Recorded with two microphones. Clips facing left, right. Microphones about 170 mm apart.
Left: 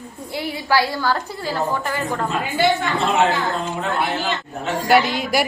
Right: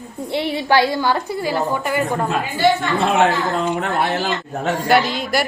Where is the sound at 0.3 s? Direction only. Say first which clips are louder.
Right 4 dB; 25° right (ahead or behind).